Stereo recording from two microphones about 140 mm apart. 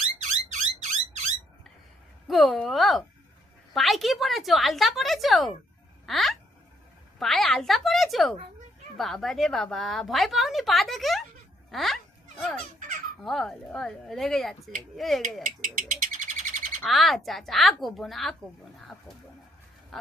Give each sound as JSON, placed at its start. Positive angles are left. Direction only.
{"t": 0.0, "sound": "a sound", "side_deg": -60}
{"t": 2.2, "sound": "a woman's voice", "side_deg": 0}
{"t": 15.4, "sound": "bird", "side_deg": -70}
{"t": 16.8, "sound": "a woman's voice", "side_deg": 0}
{"t": 19.9, "sound": "duck", "side_deg": 0}